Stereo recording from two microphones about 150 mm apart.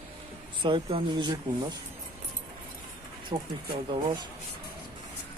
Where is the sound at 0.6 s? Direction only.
35° right (ahead or behind).